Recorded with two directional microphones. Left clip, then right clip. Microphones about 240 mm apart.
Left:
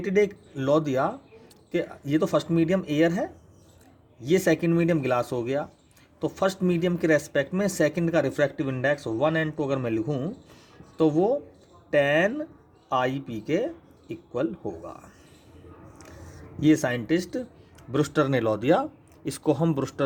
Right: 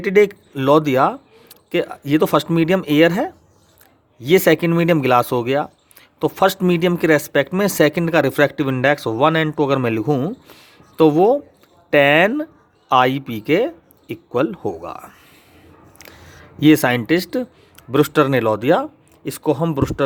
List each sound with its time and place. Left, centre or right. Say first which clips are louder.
0.0 s speech: right 9 dB; right
16.6 s speech: right 9 dB; right